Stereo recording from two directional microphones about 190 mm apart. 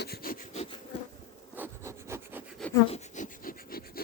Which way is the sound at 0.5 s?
35° left (ahead or behind).